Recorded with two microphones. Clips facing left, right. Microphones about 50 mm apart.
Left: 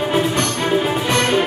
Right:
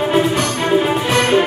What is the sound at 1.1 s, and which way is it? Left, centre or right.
Music, centre.